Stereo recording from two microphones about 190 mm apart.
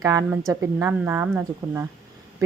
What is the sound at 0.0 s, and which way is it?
A woman's voice, 20° right (ahead or behind).